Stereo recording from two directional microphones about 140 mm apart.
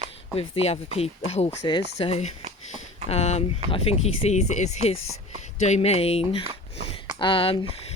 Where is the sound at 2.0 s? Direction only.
50° left (ahead or behind).